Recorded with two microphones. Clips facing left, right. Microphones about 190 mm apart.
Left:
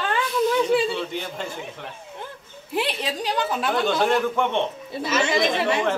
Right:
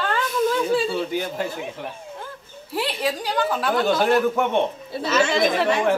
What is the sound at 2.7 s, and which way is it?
A woman's voice, 20° left (ahead or behind).